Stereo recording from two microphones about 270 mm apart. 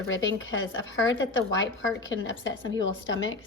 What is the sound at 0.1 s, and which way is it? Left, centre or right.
A woman's voice, left.